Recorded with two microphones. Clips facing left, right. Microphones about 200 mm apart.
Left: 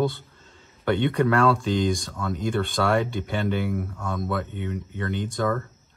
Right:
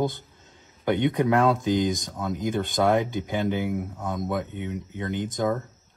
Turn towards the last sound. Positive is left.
turn(degrees=-15)  # may be behind; listen again after turning